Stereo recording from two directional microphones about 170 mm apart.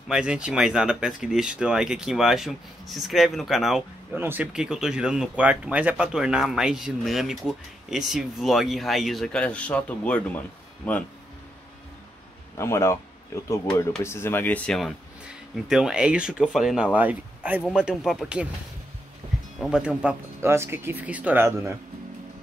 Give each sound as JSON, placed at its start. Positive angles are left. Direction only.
{"t": 0.1, "sound": "speech", "side_deg": -5}
{"t": 12.5, "sound": "speech", "side_deg": 15}
{"t": 19.2, "sound": "music", "side_deg": -30}
{"t": 19.6, "sound": "speech", "side_deg": -5}